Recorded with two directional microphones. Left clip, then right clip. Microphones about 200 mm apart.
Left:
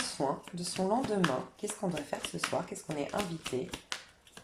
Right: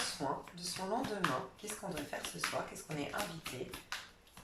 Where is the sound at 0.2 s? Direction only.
40° left (ahead or behind).